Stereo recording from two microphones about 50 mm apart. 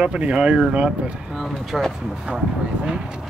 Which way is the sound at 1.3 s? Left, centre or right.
Centre.